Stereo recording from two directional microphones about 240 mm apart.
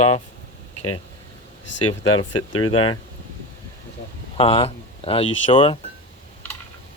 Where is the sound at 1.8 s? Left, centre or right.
Left.